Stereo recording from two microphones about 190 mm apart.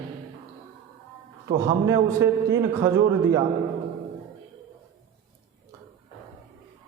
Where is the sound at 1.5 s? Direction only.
15° right (ahead or behind).